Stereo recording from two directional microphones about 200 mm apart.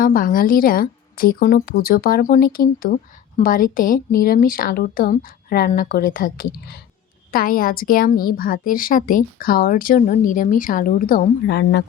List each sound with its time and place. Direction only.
0.0 s a woman's voice: 45° left (ahead or behind)